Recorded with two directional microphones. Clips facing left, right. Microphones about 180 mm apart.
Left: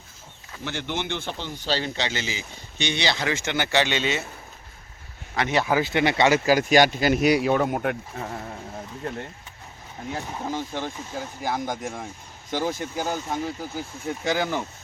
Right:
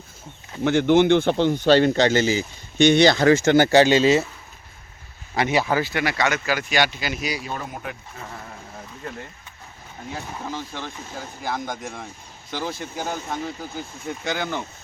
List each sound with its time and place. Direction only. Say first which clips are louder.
0.6 s speech: right 14 dB; 50° right (ahead or behind); by 4.2 s 35° right (ahead or behind)
5.4 s speech: right 2 dB; 10° right (ahead or behind)
5.8 s speech: left 3 dB; 20° left (ahead or behind); by 7.3 s 55° left (ahead or behind)
7.4 s speech: left 10 dB; 70° left (ahead or behind)
10.2 s speech: left 2 dB; 15° left (ahead or behind)
11.5 s speech: left 1 dB; centre (ahead or behind)
12.5 s speech: left 3 dB; 15° left (ahead or behind)
12.7 s speech: left 2 dB; 45° left (ahead or behind)
13.1 s speech: even; 5° left (ahead or behind)